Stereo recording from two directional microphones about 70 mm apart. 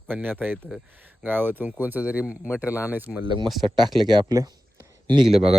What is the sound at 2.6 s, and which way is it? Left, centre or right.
Speech, left.